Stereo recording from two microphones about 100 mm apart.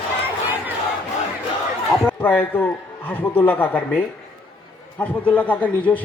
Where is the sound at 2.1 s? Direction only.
15° left (ahead or behind).